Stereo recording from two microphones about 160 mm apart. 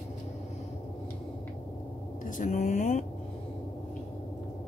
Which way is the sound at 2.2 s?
55° left (ahead or behind).